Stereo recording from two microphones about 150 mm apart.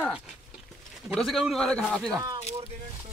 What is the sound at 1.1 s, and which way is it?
Speech, centre (ahead or behind).